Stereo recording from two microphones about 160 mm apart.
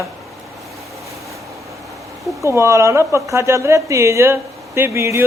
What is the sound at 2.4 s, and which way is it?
A woman's voice, 15° right (ahead or behind).